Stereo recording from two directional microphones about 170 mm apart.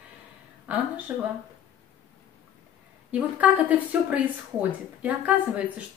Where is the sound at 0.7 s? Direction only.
10° right (ahead or behind).